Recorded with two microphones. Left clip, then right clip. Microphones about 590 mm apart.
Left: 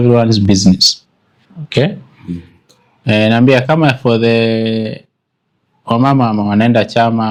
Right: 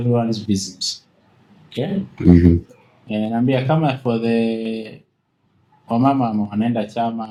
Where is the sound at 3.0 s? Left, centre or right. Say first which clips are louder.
Left 11 dB; left.